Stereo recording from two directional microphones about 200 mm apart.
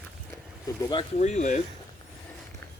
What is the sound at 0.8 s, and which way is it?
Speech, 20° left (ahead or behind).